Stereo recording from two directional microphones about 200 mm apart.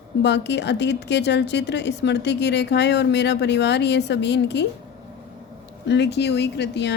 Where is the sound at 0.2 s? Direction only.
60° left (ahead or behind).